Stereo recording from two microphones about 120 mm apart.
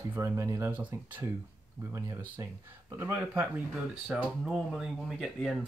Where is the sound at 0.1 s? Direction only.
20° right (ahead or behind).